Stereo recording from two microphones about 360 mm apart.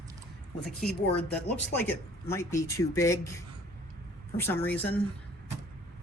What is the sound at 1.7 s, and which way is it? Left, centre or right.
Speech, centre.